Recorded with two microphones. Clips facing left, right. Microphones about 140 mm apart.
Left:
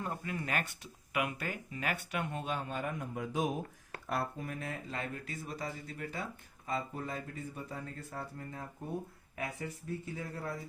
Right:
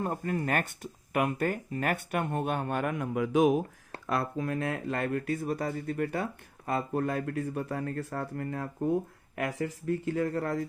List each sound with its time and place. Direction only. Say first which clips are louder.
0.0 s speech: right 8 dB; 45° right (ahead or behind); by 10.7 s 75° right (ahead or behind)